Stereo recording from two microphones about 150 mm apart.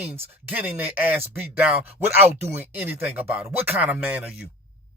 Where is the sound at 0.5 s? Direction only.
10° right (ahead or behind).